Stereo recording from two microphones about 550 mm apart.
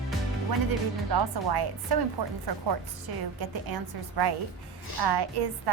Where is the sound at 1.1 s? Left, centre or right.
Right.